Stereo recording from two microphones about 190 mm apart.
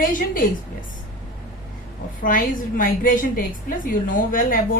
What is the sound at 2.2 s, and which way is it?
A woman's voice, 45° left (ahead or behind).